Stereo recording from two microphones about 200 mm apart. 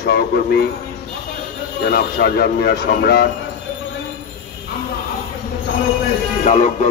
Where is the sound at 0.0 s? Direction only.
55° left (ahead or behind).